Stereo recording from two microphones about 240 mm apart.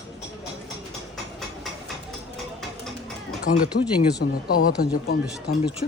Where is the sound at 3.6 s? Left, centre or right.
Left.